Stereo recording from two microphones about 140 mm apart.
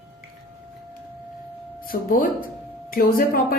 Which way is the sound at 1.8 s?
90° left.